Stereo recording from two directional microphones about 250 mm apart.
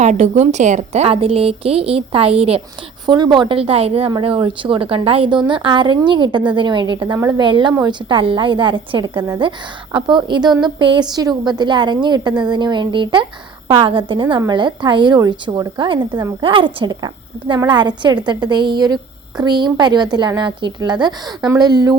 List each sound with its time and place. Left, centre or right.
0.0 s a woman's voice: right